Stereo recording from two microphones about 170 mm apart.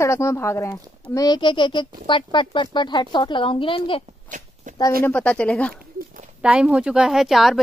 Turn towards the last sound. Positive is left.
turn(degrees=0)  # may be behind; listen again after turning